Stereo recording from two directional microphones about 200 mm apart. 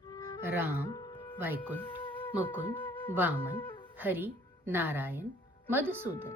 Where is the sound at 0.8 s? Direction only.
20° left (ahead or behind).